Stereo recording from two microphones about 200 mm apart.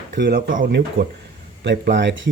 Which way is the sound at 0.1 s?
55° right (ahead or behind).